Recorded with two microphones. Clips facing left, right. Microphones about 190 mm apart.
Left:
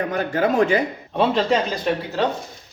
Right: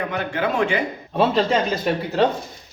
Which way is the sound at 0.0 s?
40° left (ahead or behind).